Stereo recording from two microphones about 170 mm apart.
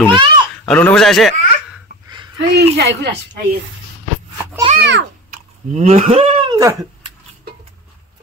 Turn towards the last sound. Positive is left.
turn(degrees=-35)  # may be behind; listen again after turning